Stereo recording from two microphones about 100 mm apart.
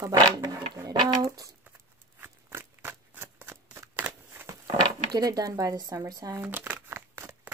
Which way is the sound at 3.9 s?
20° right (ahead or behind).